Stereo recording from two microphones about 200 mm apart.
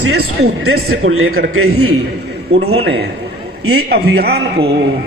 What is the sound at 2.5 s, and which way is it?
Speech, 30° right (ahead or behind).